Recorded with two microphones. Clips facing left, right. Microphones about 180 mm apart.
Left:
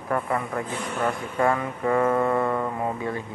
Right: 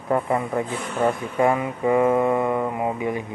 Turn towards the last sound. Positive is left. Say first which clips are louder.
# right 3 dB
turn(degrees=-15)  # may be behind; listen again after turning